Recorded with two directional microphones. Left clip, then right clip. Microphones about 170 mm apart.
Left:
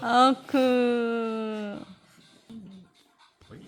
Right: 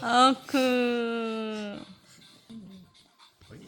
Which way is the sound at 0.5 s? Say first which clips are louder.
Left 2 dB; 15° left (ahead or behind).